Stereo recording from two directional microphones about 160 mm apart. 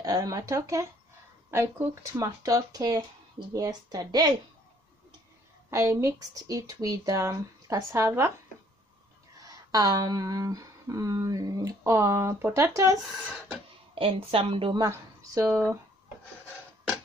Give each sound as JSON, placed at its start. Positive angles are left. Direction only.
{"t": 0.0, "sound": "speech", "side_deg": -25}
{"t": 5.7, "sound": "speech", "side_deg": -20}
{"t": 9.4, "sound": "speech", "side_deg": -20}
{"t": 13.9, "sound": "a woman's voice", "side_deg": -35}
{"t": 14.8, "sound": "speech", "side_deg": -20}